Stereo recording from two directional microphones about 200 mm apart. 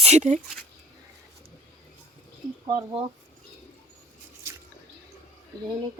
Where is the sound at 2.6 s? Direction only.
20° right (ahead or behind).